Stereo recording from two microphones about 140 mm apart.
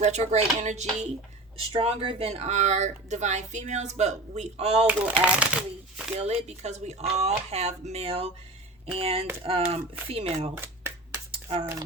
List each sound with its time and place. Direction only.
0.0 s chopping: 55° right (ahead or behind)
1.7 s speech: 40° right (ahead or behind)
4.9 s speech: 10° right (ahead or behind)
6.1 s speech: 50° right (ahead or behind)
10.5 s finger snapping: 15° right (ahead or behind)
11.3 s a sound: 45° right (ahead or behind)